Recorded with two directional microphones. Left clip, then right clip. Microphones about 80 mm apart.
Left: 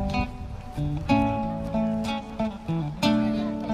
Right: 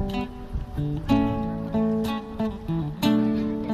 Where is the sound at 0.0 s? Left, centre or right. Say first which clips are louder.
Left 2 dB; right.